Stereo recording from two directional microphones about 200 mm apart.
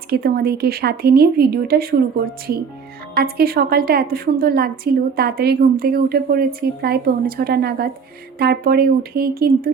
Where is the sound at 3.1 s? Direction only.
50° right (ahead or behind).